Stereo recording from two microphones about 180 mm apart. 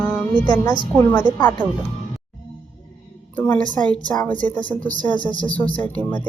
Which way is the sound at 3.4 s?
10° left (ahead or behind).